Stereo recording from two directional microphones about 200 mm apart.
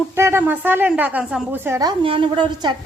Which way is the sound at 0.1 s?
10° right (ahead or behind).